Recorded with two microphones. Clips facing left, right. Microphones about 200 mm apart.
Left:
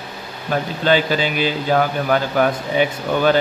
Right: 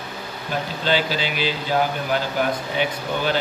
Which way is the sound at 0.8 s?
50° left (ahead or behind).